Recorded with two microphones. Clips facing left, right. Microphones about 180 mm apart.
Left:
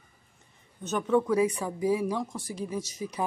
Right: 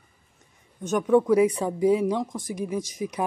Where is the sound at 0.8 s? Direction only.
15° right (ahead or behind).